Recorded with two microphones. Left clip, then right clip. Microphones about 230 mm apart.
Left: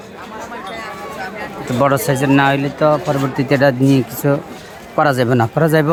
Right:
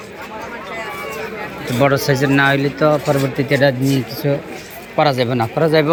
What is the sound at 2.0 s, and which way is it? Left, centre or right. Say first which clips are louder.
Speech: left 1 dB; centre.